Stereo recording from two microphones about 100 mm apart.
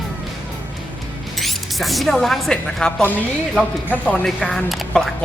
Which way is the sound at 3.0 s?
20° left (ahead or behind).